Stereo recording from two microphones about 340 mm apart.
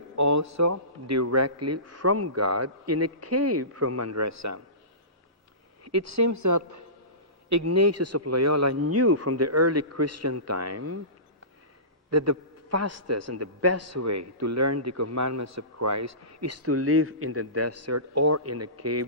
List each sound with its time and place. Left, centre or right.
0.2 s a man's voice: right
5.8 s a woman's voice: right
12.1 s a man's voice: right